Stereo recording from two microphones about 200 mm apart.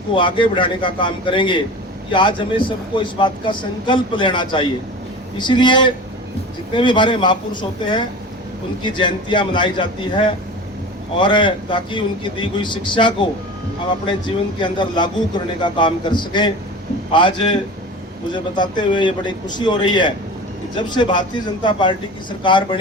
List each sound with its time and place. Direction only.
0.2 s a man's voice: 25° left (ahead or behind)
18.5 s a man's voice: 25° left (ahead or behind)